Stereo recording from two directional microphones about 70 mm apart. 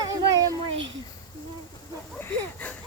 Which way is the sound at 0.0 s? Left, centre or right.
Right.